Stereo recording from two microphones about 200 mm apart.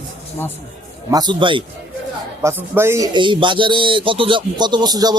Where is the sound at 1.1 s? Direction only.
20° right (ahead or behind).